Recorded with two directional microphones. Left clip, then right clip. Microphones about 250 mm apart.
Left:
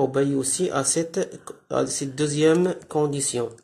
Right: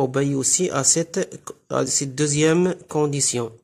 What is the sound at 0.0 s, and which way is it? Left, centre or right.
Speech, right.